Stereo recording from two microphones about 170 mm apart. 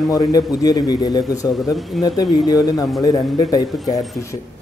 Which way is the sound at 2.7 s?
Centre (ahead or behind).